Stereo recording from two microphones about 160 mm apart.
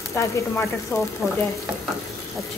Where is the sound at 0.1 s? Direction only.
20° left (ahead or behind).